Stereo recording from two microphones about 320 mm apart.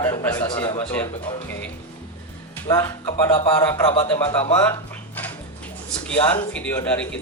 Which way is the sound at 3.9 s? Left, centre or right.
Centre.